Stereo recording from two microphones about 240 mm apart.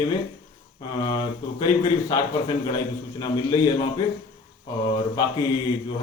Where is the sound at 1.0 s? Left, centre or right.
Centre.